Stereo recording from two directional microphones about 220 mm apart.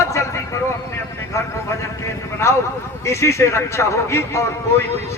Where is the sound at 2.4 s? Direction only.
10° left (ahead or behind).